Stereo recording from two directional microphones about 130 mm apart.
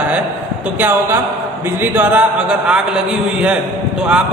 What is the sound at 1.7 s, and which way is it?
A man's voice, 15° right (ahead or behind).